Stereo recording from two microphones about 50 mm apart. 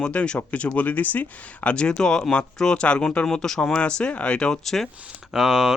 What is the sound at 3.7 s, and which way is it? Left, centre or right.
Speech, left.